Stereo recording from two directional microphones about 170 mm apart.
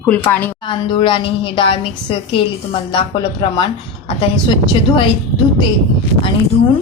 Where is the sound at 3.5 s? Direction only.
30° left (ahead or behind).